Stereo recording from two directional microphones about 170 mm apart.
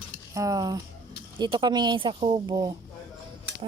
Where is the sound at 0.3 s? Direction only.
20° right (ahead or behind).